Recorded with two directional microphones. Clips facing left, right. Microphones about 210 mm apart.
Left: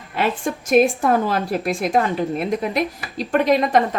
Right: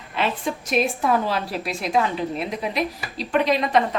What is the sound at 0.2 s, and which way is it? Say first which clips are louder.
A woman's voice: left 3 dB; 50° left (ahead or behind).